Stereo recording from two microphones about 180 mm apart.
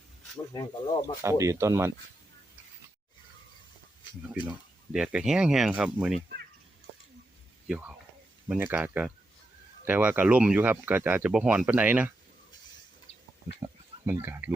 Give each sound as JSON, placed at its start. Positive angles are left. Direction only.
{"t": 0.5, "sound": "speech", "side_deg": 20}
{"t": 1.2, "sound": "speech", "side_deg": -15}
{"t": 4.4, "sound": "speech", "side_deg": -5}
{"t": 7.7, "sound": "speech", "side_deg": -10}
{"t": 13.6, "sound": "speech", "side_deg": -15}